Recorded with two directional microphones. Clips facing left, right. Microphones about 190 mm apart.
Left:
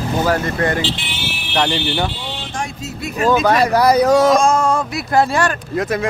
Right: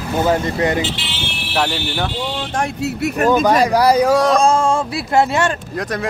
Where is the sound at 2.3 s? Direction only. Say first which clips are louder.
Right 5 dB; 50° right (ahead or behind).